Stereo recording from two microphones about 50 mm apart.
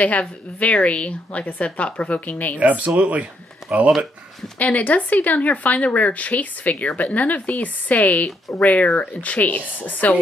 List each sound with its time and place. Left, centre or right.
0.0 s a woman's voice: left
2.6 s speech: right
4.6 s speech: left